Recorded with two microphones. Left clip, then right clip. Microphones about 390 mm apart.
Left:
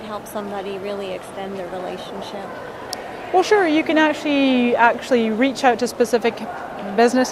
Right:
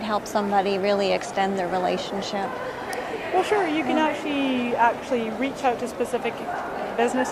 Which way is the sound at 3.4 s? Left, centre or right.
Left.